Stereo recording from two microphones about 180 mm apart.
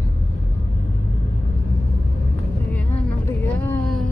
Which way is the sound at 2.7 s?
10° left (ahead or behind).